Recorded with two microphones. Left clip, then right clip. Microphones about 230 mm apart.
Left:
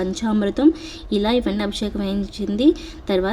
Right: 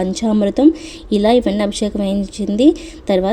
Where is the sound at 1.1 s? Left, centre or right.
Centre.